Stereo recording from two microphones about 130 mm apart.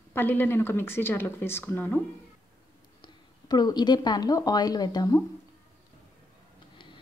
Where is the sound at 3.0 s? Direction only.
30° left (ahead or behind).